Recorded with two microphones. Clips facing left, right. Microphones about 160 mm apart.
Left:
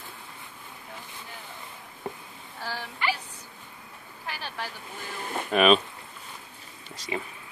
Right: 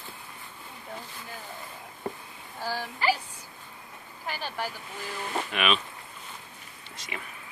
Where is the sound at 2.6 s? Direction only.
15° right (ahead or behind).